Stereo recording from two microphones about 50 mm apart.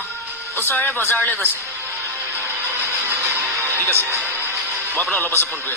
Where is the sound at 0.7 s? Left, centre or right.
Left.